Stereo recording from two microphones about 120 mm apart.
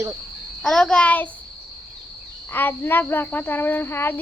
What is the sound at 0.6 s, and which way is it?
Speech, centre (ahead or behind).